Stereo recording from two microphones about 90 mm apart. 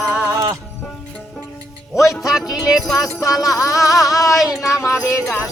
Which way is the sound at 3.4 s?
40° left (ahead or behind).